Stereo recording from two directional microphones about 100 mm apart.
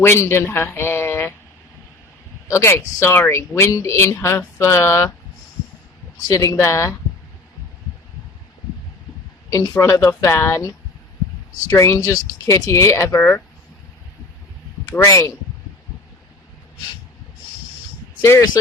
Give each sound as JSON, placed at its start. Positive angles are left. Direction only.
{"t": 0.0, "sound": "a man's voice", "side_deg": 25}
{"t": 2.5, "sound": "speech", "side_deg": 30}
{"t": 6.3, "sound": "speech", "side_deg": 30}
{"t": 9.5, "sound": "speech", "side_deg": 30}
{"t": 14.8, "sound": "speech", "side_deg": 30}
{"t": 18.2, "sound": "speech", "side_deg": 30}